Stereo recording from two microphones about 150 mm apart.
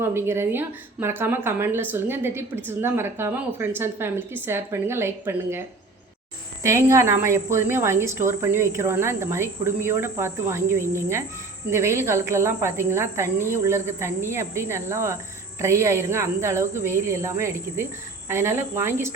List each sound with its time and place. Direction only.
0.0 s speech: 15° right (ahead or behind)